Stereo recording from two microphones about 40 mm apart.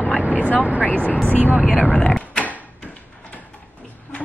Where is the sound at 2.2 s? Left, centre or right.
Left.